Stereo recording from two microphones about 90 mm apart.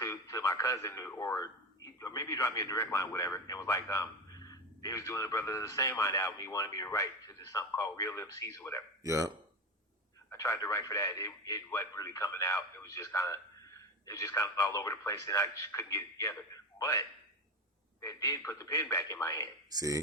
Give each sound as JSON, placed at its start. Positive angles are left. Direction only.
{"t": 0.0, "sound": "a man's voice", "side_deg": 40}
{"t": 9.0, "sound": "speech", "side_deg": -35}
{"t": 10.3, "sound": "speech", "side_deg": 40}
{"t": 18.0, "sound": "speech", "side_deg": 40}
{"t": 19.7, "sound": "speech", "side_deg": -45}